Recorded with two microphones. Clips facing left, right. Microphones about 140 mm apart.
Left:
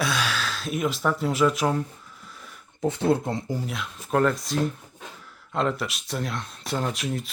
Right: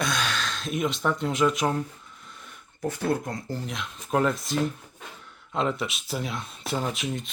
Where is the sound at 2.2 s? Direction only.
Centre (ahead or behind).